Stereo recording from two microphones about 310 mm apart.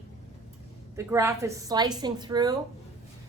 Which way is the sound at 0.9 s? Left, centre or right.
Centre.